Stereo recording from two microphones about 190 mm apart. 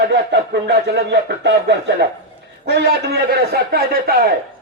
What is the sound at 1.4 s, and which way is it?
Speech, 65° right (ahead or behind).